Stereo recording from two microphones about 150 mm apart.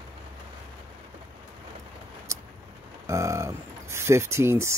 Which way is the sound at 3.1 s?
20° right (ahead or behind).